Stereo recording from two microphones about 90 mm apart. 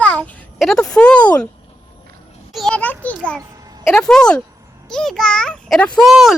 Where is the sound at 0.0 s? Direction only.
15° left (ahead or behind).